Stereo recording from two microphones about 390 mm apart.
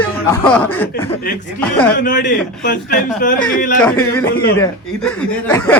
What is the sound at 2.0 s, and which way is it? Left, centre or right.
A man's voice, left.